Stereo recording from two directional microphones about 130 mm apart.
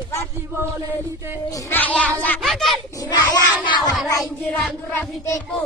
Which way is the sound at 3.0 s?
30° left (ahead or behind).